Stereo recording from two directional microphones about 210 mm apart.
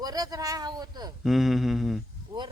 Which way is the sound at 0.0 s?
20° right (ahead or behind).